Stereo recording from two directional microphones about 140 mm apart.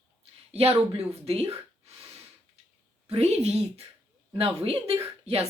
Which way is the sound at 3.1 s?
50° right (ahead or behind).